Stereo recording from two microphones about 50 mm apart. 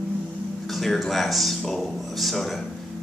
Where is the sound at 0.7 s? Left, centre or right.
Centre.